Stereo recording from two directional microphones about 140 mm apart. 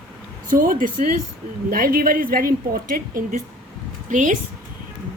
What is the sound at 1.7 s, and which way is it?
A woman's voice, 90° right.